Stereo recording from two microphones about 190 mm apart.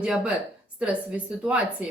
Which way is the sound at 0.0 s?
5° right (ahead or behind).